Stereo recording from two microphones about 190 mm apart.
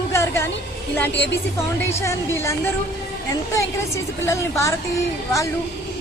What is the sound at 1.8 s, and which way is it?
Speech, 15° left (ahead or behind).